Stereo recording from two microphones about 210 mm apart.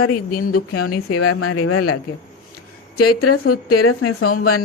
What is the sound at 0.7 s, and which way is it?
Speech, 90° left.